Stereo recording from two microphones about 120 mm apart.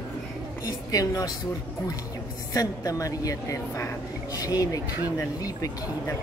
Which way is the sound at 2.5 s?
30° left (ahead or behind).